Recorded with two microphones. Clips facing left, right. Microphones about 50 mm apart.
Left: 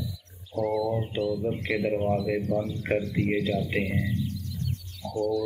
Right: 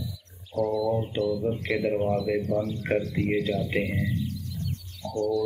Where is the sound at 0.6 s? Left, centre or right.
Centre.